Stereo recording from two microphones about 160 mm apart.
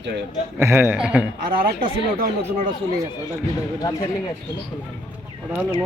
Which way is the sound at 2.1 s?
65° right (ahead or behind).